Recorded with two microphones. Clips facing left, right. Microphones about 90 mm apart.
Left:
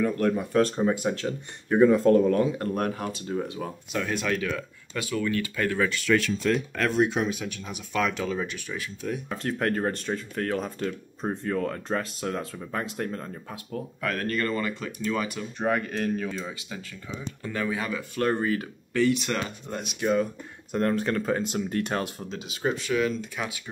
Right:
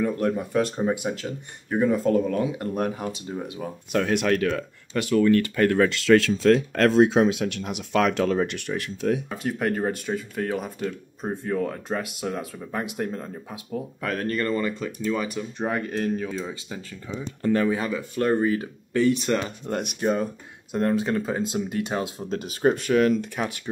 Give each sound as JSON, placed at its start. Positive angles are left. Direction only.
{"t": 0.0, "sound": "speech", "side_deg": -15}
{"t": 2.7, "sound": "speech", "side_deg": -15}
{"t": 3.9, "sound": "speech", "side_deg": -65}
{"t": 5.9, "sound": "speech", "side_deg": -90}
{"t": 9.3, "sound": "speech", "side_deg": -10}
{"t": 14.0, "sound": "speech", "side_deg": -25}
{"t": 15.0, "sound": "speech", "side_deg": -10}
{"t": 17.4, "sound": "speech", "side_deg": -45}
{"t": 17.6, "sound": "speech", "side_deg": -25}
{"t": 19.7, "sound": "speech", "side_deg": -60}
{"t": 20.0, "sound": "speech", "side_deg": -40}
{"t": 20.7, "sound": "speech", "side_deg": -15}
{"t": 22.3, "sound": "speech", "side_deg": -45}